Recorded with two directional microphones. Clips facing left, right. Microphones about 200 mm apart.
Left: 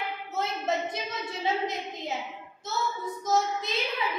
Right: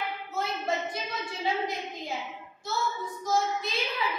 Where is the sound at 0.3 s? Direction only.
20° left (ahead or behind).